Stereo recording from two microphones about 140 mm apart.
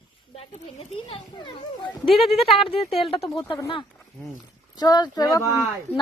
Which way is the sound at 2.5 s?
45° left (ahead or behind).